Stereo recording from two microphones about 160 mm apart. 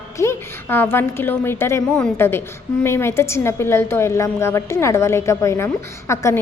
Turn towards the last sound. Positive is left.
turn(degrees=20)  # may be behind; listen again after turning